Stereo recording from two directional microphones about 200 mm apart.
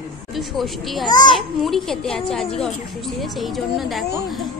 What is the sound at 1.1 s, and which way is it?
Speech, 20° left (ahead or behind).